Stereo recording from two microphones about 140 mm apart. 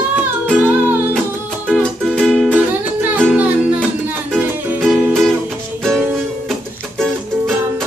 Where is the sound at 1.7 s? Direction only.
5° left (ahead or behind).